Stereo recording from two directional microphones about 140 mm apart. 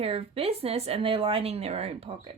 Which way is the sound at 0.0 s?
45° right (ahead or behind).